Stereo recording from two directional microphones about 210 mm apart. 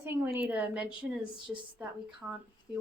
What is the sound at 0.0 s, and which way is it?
A woman's voice, 10° right (ahead or behind).